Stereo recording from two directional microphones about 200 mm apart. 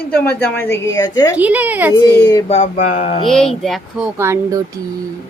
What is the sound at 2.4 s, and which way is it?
Speech, 35° left (ahead or behind).